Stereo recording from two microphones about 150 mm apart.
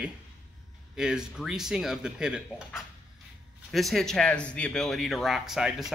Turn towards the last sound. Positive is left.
turn(degrees=0)  # may be behind; listen again after turning